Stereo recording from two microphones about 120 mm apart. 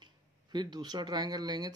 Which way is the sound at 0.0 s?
40° right (ahead or behind).